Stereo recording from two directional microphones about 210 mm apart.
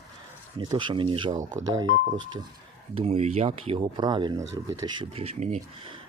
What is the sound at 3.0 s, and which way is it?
Speech, 30° right (ahead or behind).